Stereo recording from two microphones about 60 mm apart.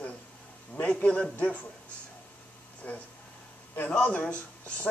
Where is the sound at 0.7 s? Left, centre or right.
Left.